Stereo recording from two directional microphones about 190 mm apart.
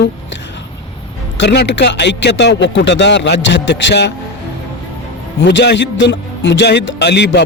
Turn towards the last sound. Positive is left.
turn(degrees=60)  # may be behind; listen again after turning